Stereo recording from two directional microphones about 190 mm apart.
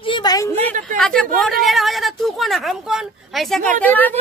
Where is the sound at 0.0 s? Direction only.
25° left (ahead or behind).